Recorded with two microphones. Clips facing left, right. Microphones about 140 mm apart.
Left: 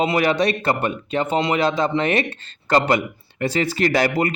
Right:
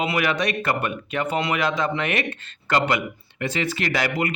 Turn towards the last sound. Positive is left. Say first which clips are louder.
# left 5 dB
turn(degrees=40)  # may be behind; listen again after turning